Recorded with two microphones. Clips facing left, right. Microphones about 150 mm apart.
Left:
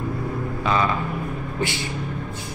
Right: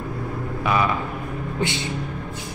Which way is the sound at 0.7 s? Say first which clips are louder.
Even; 15° right (ahead or behind).